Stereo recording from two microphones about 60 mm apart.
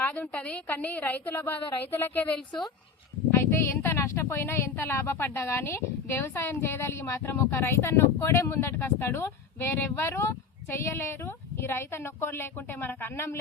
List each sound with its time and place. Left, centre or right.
0.0 s a woman's voice: left
3.3 s speech: left